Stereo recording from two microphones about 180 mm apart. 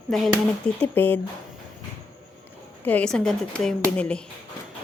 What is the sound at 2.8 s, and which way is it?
A woman's voice, 5° left (ahead or behind).